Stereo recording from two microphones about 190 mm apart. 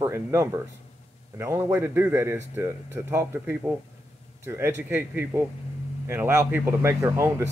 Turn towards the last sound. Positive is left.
turn(degrees=-15)  # may be behind; listen again after turning